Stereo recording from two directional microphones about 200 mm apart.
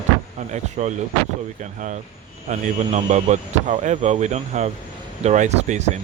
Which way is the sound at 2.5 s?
35° right (ahead or behind).